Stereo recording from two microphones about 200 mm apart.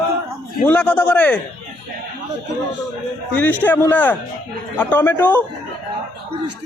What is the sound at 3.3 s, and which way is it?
Speech, 10° left (ahead or behind).